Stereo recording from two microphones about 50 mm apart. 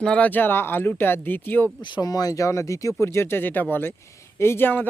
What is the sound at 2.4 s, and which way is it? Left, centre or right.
Speech, left.